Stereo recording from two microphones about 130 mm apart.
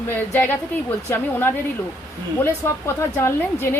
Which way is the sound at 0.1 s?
15° left (ahead or behind).